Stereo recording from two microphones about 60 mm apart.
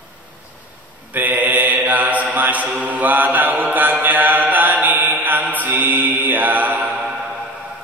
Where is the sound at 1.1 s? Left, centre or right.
Right.